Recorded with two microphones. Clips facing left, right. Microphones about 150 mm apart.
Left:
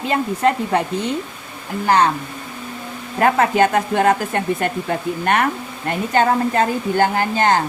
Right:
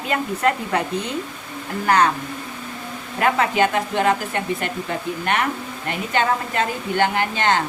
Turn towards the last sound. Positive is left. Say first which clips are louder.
# left 3 dB
turn(degrees=40)  # may be behind; listen again after turning